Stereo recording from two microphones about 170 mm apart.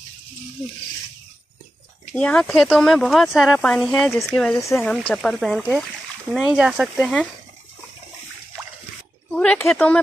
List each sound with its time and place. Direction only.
2.1 s speech: 5° left (ahead or behind)
4.6 s speech: 15° left (ahead or behind)
4.8 s speech: 5° left (ahead or behind)
9.3 s speech: 5° left (ahead or behind)